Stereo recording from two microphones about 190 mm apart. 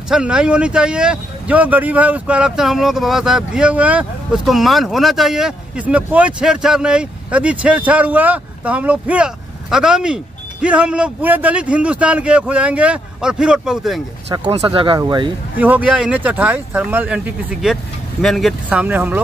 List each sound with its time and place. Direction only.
0.1 s speech: 5° right (ahead or behind)
14.6 s speech: 25° right (ahead or behind)
15.6 s speech: 5° right (ahead or behind)